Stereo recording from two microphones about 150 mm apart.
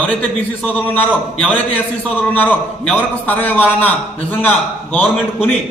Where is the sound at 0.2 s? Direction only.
5° left (ahead or behind).